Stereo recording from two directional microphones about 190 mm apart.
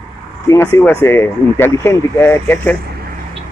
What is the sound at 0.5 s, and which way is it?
Speech, 15° left (ahead or behind).